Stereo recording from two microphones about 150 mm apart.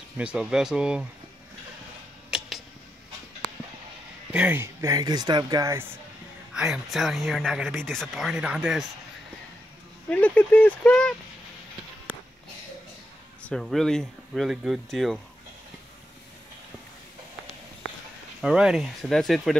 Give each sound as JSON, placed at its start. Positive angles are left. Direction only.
{"t": 0.2, "sound": "speech", "side_deg": -5}
{"t": 2.3, "sound": "a sound", "side_deg": -5}
{"t": 4.3, "sound": "speech", "side_deg": -10}
{"t": 4.8, "sound": "speech", "side_deg": -25}
{"t": 6.5, "sound": "speech", "side_deg": -5}
{"t": 10.0, "sound": "speech", "side_deg": 10}
{"t": 13.5, "sound": "speech", "side_deg": 0}
{"t": 18.4, "sound": "speech", "side_deg": -5}